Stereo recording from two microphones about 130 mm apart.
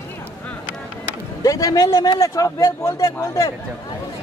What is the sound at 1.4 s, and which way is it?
Speech, 25° left (ahead or behind).